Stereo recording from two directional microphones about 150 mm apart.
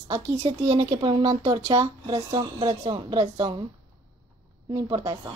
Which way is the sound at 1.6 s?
25° right (ahead or behind).